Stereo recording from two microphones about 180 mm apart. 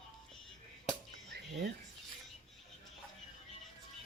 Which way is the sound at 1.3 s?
75° right (ahead or behind).